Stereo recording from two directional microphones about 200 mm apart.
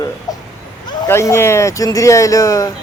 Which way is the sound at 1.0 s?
15° left (ahead or behind).